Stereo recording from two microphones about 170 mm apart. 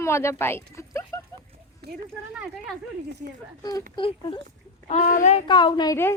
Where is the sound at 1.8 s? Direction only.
75° right (ahead or behind).